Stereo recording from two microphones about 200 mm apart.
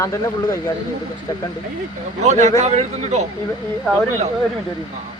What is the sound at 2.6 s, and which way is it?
Speech, 35° right (ahead or behind).